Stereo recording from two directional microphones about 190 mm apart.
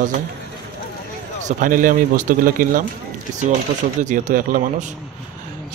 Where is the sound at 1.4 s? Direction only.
45° right (ahead or behind).